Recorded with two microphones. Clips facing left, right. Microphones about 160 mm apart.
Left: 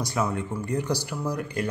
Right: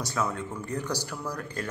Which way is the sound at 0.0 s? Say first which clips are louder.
Left 3 dB; 15° left (ahead or behind).